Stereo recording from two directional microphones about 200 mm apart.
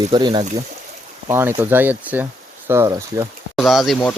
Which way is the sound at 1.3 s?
10° right (ahead or behind).